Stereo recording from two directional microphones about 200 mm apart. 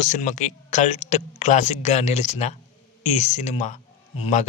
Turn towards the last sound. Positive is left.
turn(degrees=35)  # may be behind; listen again after turning